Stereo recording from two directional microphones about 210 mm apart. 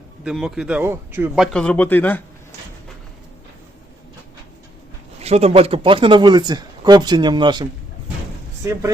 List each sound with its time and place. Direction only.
0.3 s speech: 5° right (ahead or behind)
1.5 s speech: 5° left (ahead or behind)
5.2 s speech: 30° right (ahead or behind)